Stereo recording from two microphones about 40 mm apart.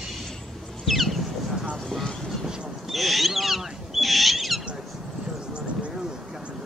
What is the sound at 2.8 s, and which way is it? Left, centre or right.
Owl, centre.